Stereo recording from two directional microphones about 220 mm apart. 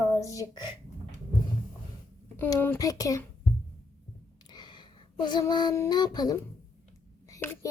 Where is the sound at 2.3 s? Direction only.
10° left (ahead or behind).